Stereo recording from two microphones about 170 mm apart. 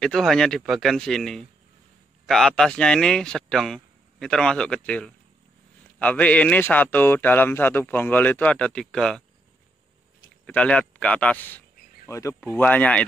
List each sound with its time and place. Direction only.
0.0 s speech: centre (ahead or behind)
10.4 s speech: 5° left (ahead or behind)